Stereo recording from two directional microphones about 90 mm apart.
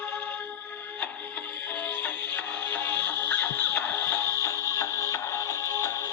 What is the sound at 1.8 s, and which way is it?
Music, 20° left (ahead or behind).